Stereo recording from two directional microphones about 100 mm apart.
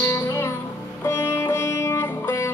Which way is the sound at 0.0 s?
25° left (ahead or behind).